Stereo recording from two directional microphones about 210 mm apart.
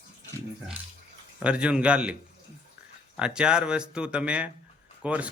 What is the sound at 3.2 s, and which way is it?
A man's voice, 5° right (ahead or behind).